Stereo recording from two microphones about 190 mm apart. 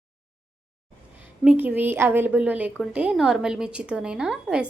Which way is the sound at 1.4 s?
5° right (ahead or behind).